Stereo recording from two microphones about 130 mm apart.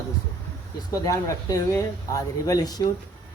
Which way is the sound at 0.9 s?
25° left (ahead or behind).